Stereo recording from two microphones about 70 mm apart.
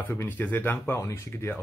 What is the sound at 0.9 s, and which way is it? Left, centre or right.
Speech, left.